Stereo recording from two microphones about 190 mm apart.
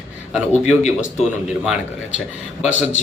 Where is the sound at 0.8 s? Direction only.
40° left (ahead or behind).